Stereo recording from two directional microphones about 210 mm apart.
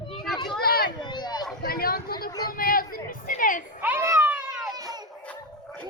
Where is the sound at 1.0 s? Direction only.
20° left (ahead or behind).